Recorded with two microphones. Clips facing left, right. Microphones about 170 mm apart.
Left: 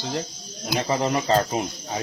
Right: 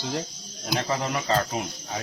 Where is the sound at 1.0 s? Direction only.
25° left (ahead or behind).